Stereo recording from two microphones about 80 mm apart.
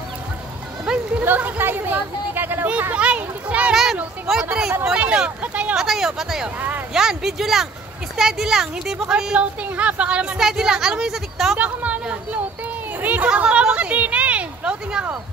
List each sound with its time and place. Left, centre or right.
0.8 s speech: right
3.7 s speech: centre
4.8 s speech: centre
5.8 s speech: centre
11.5 s speech: centre
13.0 s a sound: centre